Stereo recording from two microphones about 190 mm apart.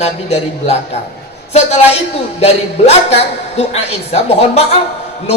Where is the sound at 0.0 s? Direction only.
35° left (ahead or behind).